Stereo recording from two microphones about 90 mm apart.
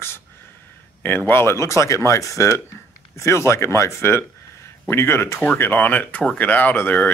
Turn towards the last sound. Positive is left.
turn(degrees=20)  # may be behind; listen again after turning